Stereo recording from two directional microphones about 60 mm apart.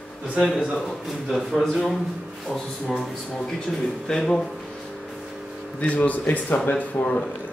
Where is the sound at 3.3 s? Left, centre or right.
Centre.